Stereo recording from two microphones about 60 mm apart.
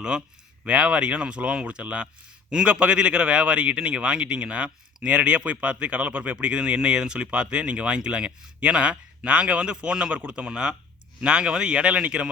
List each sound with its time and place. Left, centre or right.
0.6 s speech: right